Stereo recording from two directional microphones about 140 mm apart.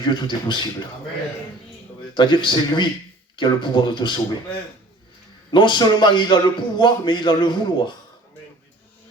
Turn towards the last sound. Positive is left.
turn(degrees=35)  # may be behind; listen again after turning